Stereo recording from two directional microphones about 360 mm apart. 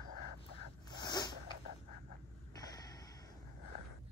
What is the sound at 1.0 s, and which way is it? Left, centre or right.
Zipper, centre.